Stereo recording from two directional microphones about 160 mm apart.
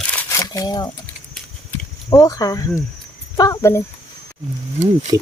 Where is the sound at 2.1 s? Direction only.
20° left (ahead or behind).